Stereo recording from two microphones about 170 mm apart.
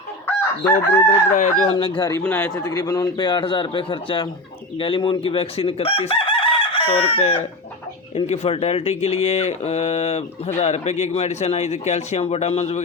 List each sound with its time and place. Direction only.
0.3 s chicken: 10° left (ahead or behind)
1.4 s speech: 45° left (ahead or behind)
1.7 s a man's voice: 30° left (ahead or behind)
4.8 s chicken: 30° left (ahead or behind)
8.1 s speech: 35° left (ahead or behind)